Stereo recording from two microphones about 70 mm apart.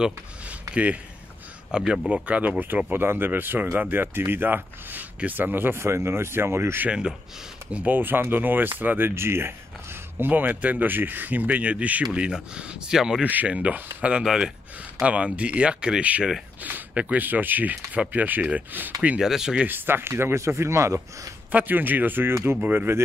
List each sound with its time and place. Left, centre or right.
0.0 s speech: centre
2.9 s speech: right
6.9 s speech: centre
7.7 s speech: right; by 13.2 s centre
13.2 s speech: right
14.2 s speech: centre; by 18.9 s right
19.1 s speech: centre
19.6 s speech: right
21.5 s speech: right